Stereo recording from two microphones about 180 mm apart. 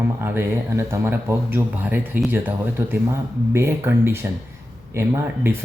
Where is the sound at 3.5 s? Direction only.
15° right (ahead or behind).